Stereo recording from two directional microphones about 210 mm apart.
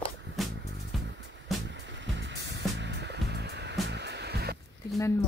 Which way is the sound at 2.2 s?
55° right (ahead or behind).